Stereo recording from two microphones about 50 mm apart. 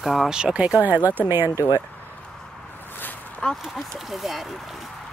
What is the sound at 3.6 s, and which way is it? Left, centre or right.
Speech, centre.